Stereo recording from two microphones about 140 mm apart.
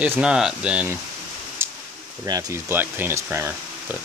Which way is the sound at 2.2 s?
25° right (ahead or behind).